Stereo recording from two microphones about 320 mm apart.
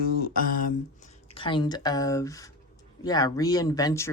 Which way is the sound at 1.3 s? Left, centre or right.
Centre.